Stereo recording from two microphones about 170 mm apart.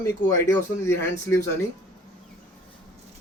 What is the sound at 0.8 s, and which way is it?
Speech, 15° left (ahead or behind).